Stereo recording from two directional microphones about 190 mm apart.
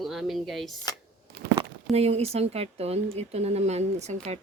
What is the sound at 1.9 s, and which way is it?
Speech, 35° right (ahead or behind).